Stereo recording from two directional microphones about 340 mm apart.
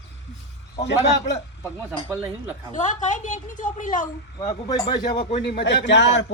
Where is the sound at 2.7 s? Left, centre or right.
Left.